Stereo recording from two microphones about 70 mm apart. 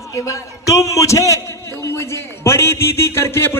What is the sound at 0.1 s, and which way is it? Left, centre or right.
A man's voice, left.